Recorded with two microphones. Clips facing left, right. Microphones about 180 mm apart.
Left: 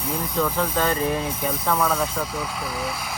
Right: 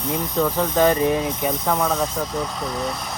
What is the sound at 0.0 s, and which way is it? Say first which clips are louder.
Speech: right 3 dB; 10° left (ahead or behind).